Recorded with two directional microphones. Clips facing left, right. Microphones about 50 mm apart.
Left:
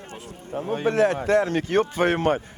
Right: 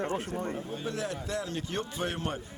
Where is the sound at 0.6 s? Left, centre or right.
Left.